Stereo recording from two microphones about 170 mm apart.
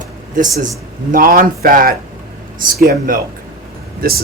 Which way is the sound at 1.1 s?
55° right (ahead or behind).